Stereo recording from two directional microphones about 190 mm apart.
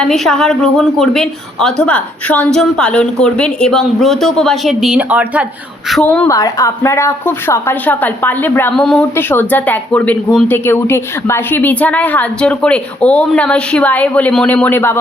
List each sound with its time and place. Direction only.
0.0 s a woman's voice: centre (ahead or behind)
5.9 s a woman's voice: 5° left (ahead or behind)
6.2 s a woman's voice: 15° left (ahead or behind)